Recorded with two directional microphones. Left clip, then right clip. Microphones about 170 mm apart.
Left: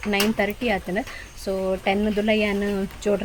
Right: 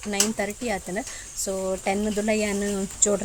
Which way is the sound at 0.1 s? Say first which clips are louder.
Left 4 dB; 15° right (ahead or behind).